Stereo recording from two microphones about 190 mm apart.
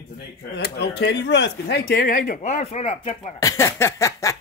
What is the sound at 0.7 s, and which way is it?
Speech, 65° left (ahead or behind).